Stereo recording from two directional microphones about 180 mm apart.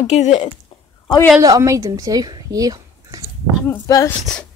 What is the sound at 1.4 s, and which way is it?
Speech, 20° right (ahead or behind).